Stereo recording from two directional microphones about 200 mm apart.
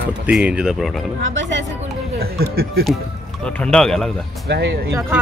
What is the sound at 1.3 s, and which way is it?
Speech, 65° right (ahead or behind).